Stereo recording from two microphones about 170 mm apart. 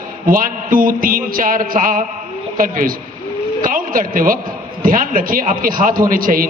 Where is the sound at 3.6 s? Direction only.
55° right (ahead or behind).